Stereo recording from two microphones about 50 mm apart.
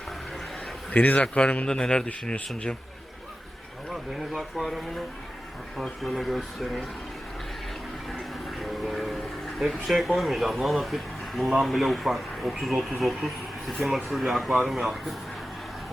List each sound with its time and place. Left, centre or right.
0.9 s speech: left
4.1 s speech: centre
8.4 s vehicle: centre
9.6 s speech: centre